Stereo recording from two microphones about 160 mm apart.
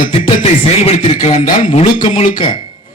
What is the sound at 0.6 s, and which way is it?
Speech, 40° left (ahead or behind).